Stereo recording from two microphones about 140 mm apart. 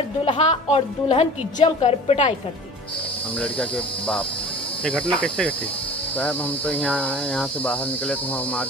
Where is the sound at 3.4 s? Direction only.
10° left (ahead or behind).